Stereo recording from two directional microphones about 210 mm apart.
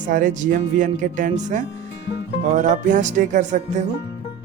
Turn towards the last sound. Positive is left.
turn(degrees=-35)  # may be behind; listen again after turning